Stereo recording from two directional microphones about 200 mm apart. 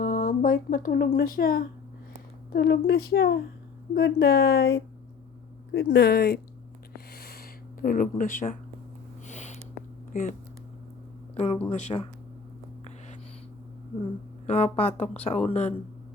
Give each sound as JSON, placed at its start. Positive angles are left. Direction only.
{"t": 0.0, "sound": "a woman's voice", "side_deg": 45}
{"t": 6.9, "sound": "a sound", "side_deg": 50}
{"t": 9.2, "sound": "sniff", "side_deg": 35}
{"t": 10.1, "sound": "speech", "side_deg": 40}
{"t": 11.3, "sound": "speech", "side_deg": 30}
{"t": 14.4, "sound": "speech", "side_deg": 30}